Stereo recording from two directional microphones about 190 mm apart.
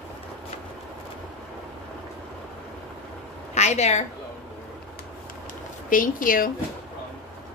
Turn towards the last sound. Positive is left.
turn(degrees=45)  # may be behind; listen again after turning